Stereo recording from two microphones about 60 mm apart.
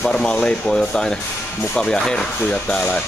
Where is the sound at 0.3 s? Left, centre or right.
Centre.